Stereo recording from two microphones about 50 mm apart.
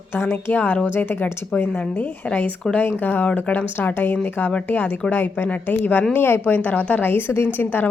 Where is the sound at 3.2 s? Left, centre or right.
Left.